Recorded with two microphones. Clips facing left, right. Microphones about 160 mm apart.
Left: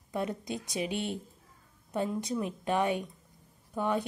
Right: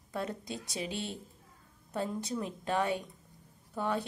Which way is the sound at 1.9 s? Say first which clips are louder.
Left 3 dB; 15° left (ahead or behind).